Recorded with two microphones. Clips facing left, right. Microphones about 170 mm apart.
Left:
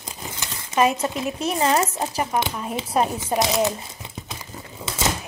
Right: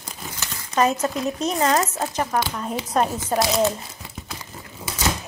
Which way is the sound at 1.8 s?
15° left (ahead or behind).